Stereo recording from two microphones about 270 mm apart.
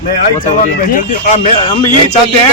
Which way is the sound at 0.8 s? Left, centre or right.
Left.